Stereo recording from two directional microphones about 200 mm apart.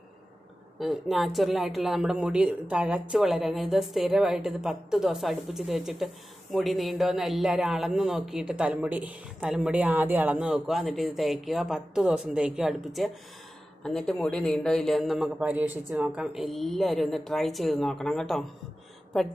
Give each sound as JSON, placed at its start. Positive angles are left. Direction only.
{"t": 0.7, "sound": "speech", "side_deg": 0}